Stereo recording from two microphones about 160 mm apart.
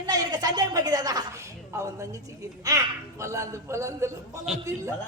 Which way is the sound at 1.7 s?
20° right (ahead or behind).